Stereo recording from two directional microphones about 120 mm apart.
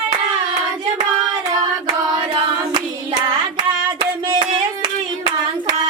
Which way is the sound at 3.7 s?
40° right (ahead or behind).